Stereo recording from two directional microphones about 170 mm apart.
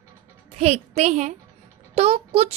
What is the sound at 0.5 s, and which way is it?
A woman's voice, 40° right (ahead or behind).